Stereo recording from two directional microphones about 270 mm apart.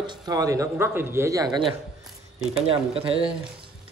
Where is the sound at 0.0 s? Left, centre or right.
Centre.